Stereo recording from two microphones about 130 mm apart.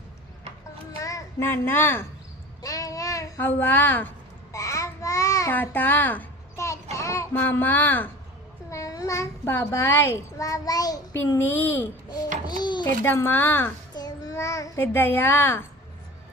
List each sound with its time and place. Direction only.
1.0 s a child's voice: 20° left (ahead or behind)
2.6 s a sound: 25° left (ahead or behind)
4.5 s child singing: 25° left (ahead or behind)
5.5 s a woman's voice: 15° left (ahead or behind)
8.7 s a child's voice: 25° left (ahead or behind)
11.3 s a woman's voice: 15° left (ahead or behind)
12.5 s a sound: 35° left (ahead or behind)
12.8 s a woman's voice: 15° left (ahead or behind)
13.9 s child singing: 30° left (ahead or behind)